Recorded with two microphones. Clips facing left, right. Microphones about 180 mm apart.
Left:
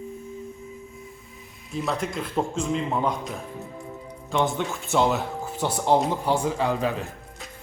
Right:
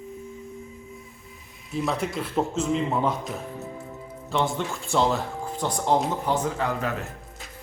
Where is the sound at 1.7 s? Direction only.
5° right (ahead or behind); by 7.0 s 15° left (ahead or behind).